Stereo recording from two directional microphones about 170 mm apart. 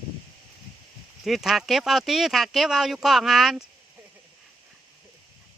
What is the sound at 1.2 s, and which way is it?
Speech, centre (ahead or behind).